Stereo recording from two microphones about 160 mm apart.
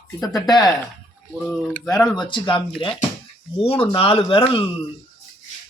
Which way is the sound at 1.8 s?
25° left (ahead or behind).